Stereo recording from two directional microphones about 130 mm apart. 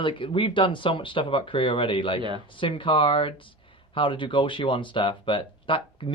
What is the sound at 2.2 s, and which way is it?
Speech, 40° right (ahead or behind).